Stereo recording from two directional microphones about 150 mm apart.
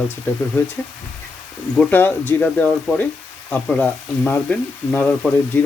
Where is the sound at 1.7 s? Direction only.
10° left (ahead or behind).